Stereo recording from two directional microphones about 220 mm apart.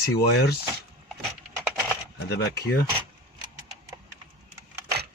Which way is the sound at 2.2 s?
45° left (ahead or behind).